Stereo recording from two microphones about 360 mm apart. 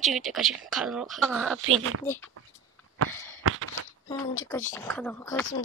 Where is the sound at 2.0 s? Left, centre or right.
Centre.